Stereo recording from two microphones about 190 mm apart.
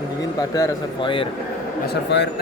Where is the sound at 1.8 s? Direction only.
65° left (ahead or behind).